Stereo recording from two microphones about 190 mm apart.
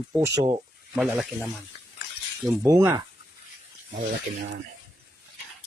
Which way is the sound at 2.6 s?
15° right (ahead or behind).